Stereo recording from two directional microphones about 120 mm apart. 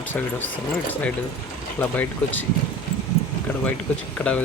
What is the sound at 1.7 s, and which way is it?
Speech, 15° left (ahead or behind).